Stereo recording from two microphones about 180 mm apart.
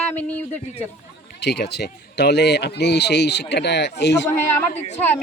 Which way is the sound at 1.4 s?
70° left (ahead or behind).